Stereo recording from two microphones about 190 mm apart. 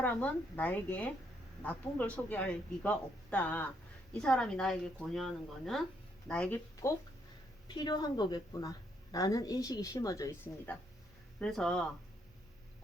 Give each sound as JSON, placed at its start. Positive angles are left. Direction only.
{"t": 0.0, "sound": "speech", "side_deg": 10}
{"t": 11.3, "sound": "speech", "side_deg": 5}